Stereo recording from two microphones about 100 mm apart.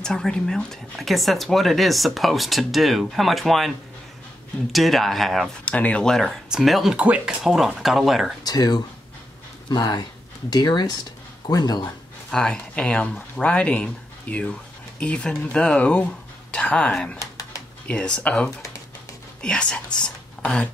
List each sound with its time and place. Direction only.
0.0 s speech: 5° left (ahead or behind)
4.7 s speech: centre (ahead or behind)
5.7 s speech: 15° left (ahead or behind)
8.5 s speech: 40° left (ahead or behind)
12.3 s speech: 5° left (ahead or behind)
17.2 s a sound: 35° left (ahead or behind)
17.8 s speech: 10° left (ahead or behind)